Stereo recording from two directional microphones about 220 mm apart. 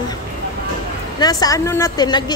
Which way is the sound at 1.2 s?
15° left (ahead or behind).